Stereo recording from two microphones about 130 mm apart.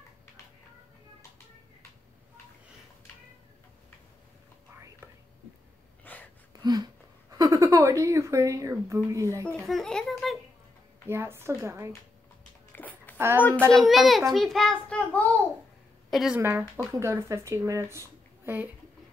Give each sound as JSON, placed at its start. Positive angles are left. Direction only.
{"t": 6.1, "sound": "a sound", "side_deg": 15}
{"t": 6.6, "sound": "speech", "side_deg": -30}
{"t": 9.5, "sound": "a child's voice", "side_deg": 0}
{"t": 11.1, "sound": "speech", "side_deg": -20}
{"t": 12.7, "sound": "a sound", "side_deg": 15}
{"t": 13.7, "sound": "a child's voice", "side_deg": 0}
{"t": 16.1, "sound": "a woman's voice", "side_deg": 0}
{"t": 16.3, "sound": "speech", "side_deg": -15}